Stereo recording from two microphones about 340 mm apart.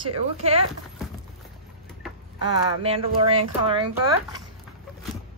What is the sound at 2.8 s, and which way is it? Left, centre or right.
Speech, centre.